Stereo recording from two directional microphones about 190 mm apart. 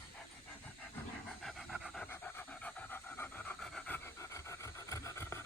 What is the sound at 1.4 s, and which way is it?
Dog, centre (ahead or behind).